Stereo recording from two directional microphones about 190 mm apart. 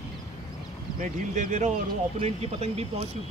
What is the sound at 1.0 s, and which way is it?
Speech, 40° right (ahead or behind).